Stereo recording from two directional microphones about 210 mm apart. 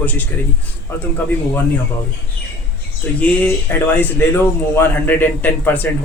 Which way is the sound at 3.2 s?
10° left (ahead or behind).